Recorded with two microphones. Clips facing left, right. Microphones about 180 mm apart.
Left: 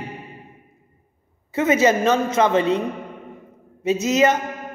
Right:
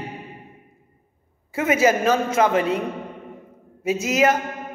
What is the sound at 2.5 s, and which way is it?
Speech, 30° left (ahead or behind).